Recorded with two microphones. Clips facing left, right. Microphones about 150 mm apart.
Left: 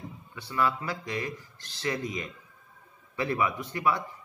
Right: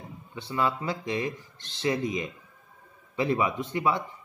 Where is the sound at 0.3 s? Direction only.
20° right (ahead or behind).